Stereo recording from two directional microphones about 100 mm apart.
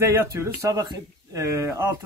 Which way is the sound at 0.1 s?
25° right (ahead or behind).